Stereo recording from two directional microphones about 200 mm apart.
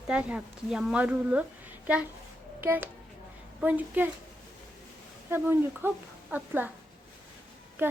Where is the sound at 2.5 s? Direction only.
10° right (ahead or behind).